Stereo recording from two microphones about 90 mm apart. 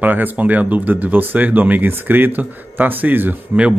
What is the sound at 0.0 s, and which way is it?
Speech, 20° right (ahead or behind).